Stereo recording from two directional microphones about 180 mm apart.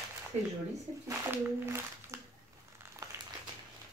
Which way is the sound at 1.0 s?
15° right (ahead or behind).